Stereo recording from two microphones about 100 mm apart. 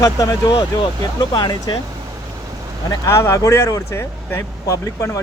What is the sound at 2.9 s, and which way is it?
Speech, 35° left (ahead or behind).